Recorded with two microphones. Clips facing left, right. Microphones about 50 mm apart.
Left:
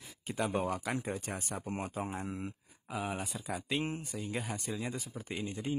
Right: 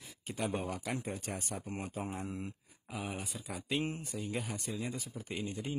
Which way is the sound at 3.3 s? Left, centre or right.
Left.